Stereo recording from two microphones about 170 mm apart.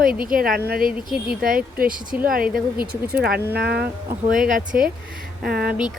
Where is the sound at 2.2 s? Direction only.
55° right (ahead or behind).